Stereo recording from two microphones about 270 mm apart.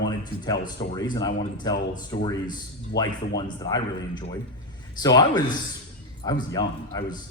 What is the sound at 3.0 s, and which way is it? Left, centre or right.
A man's voice, centre.